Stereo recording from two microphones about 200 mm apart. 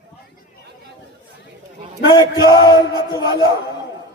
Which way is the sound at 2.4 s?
20° left (ahead or behind).